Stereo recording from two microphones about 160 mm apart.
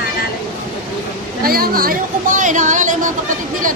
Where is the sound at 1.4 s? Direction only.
65° right (ahead or behind).